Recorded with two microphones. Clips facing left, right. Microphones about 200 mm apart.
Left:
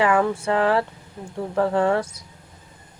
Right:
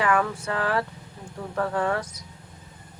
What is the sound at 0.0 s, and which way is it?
Speech, 25° left (ahead or behind).